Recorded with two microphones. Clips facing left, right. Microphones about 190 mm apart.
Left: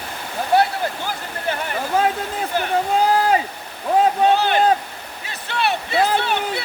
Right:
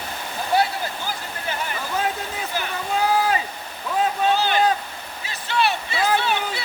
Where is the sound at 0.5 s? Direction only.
55° left (ahead or behind).